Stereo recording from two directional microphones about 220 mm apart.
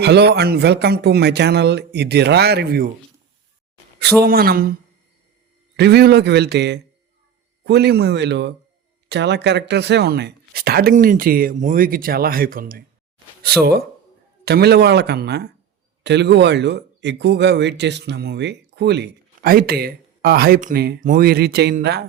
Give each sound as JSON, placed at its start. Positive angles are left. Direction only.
{"t": 0.0, "sound": "speech", "side_deg": -50}
{"t": 4.2, "sound": "speech", "side_deg": -45}
{"t": 5.7, "sound": "speech", "side_deg": -50}